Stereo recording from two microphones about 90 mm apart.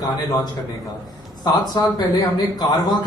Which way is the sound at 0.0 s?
50° left (ahead or behind).